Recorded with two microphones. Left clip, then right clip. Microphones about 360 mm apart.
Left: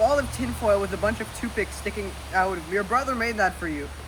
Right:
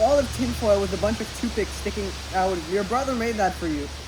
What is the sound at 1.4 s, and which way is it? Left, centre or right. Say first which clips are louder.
Speech: right 1 dB; centre.